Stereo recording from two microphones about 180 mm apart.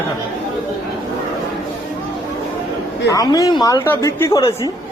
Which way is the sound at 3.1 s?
20° left (ahead or behind).